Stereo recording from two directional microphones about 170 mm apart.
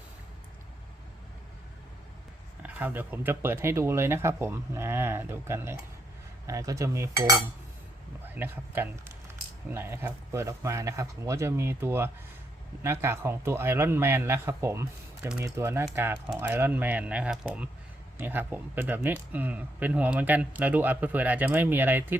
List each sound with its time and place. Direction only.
2.6 s speech: 10° right (ahead or behind)
6.5 s cutlery: 20° right (ahead or behind)
8.2 s a man's voice: 10° right (ahead or behind)